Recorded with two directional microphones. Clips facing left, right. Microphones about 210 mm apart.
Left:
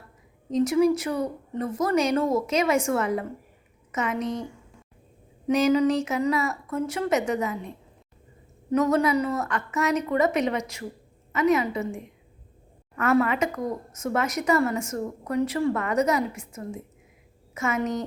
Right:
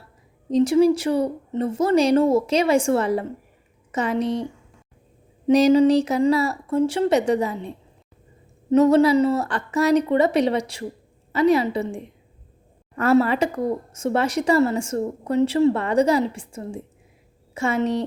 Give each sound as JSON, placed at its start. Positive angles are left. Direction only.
{"t": 0.5, "sound": "a woman's voice", "side_deg": -30}
{"t": 5.5, "sound": "a woman's voice", "side_deg": -35}
{"t": 8.7, "sound": "a woman's voice", "side_deg": -30}